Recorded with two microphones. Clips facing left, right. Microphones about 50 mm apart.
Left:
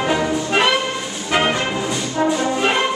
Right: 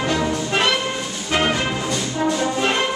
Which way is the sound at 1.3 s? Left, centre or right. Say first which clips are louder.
Left 2 dB; centre.